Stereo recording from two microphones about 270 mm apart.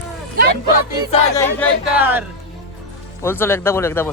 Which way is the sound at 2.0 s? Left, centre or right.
Centre.